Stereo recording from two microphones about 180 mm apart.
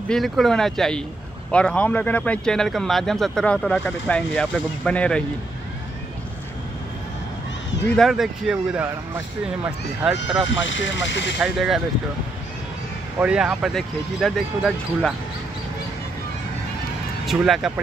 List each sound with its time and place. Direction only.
0.1 s speech: centre (ahead or behind)
7.9 s speech: centre (ahead or behind)
10.0 s speech: 5° right (ahead or behind)
10.6 s speech: 90° left
11.3 s speech: 5° right (ahead or behind)
13.2 s speech: 5° right (ahead or behind)
17.3 s speech: centre (ahead or behind)